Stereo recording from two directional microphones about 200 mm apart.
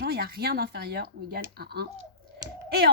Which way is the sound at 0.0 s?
50° right (ahead or behind).